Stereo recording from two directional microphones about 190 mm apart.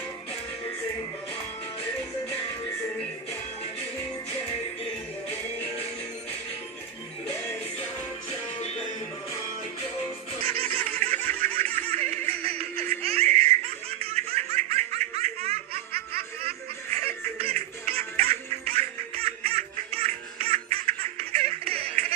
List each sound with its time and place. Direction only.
8.6 s music: 35° left (ahead or behind)
10.4 s baby laughter: 30° right (ahead or behind)
17.0 s music: 30° right (ahead or behind)